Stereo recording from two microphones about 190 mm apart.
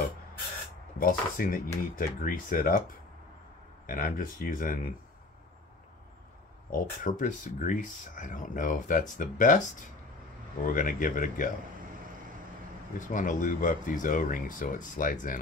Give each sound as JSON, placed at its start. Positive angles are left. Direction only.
{"t": 0.9, "sound": "speech", "side_deg": 50}
{"t": 3.8, "sound": "speech", "side_deg": 45}
{"t": 6.7, "sound": "speech", "side_deg": 45}
{"t": 10.6, "sound": "speech", "side_deg": 45}
{"t": 13.1, "sound": "speech", "side_deg": 45}